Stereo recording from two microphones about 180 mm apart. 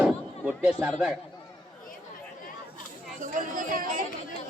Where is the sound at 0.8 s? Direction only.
5° right (ahead or behind).